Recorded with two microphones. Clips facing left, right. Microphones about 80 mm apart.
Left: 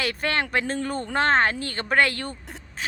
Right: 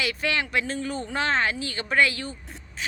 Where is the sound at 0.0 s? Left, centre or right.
Left.